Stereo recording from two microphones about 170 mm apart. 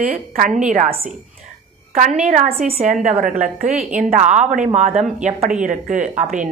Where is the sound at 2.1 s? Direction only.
45° right (ahead or behind).